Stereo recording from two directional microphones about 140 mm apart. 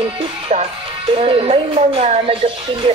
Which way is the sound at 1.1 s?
40° right (ahead or behind).